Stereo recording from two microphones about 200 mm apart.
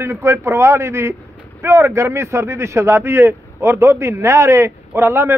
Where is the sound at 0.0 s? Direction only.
15° right (ahead or behind).